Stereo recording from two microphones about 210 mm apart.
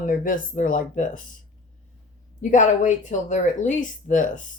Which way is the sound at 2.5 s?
35° left (ahead or behind).